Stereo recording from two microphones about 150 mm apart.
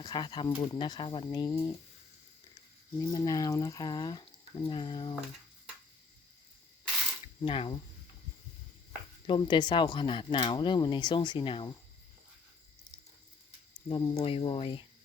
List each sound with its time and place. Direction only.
0.0 s speech: 30° left (ahead or behind)
3.0 s speech: 20° left (ahead or behind)
7.4 s speech: 35° left (ahead or behind)
9.2 s speech: 30° left (ahead or behind)
13.8 s speech: 35° left (ahead or behind)